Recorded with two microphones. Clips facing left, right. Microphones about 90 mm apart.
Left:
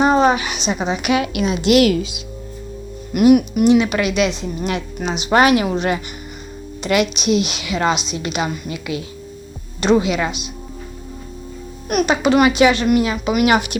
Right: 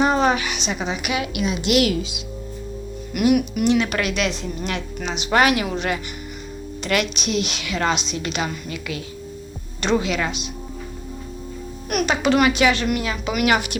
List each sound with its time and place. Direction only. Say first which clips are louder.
0.0 s a woman's voice: left 4 dB; 20° left (ahead or behind)
3.2 s speech: left 6 dB; 25° left (ahead or behind)
3.6 s a woman's voice: left 5 dB; 10° left (ahead or behind)
4.7 s speech: left 4 dB; 15° left (ahead or behind)
6.8 s a woman's voice: left 5 dB; 10° left (ahead or behind)
11.9 s speech: left 4 dB; 20° left (ahead or behind)